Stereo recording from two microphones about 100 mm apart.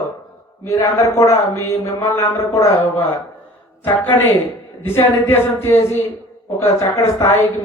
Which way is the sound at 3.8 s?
20° left (ahead or behind).